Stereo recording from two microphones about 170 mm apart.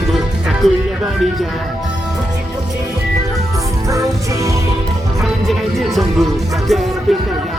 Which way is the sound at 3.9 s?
20° right (ahead or behind).